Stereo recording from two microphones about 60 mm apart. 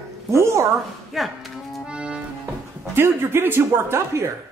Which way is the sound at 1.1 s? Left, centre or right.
Centre.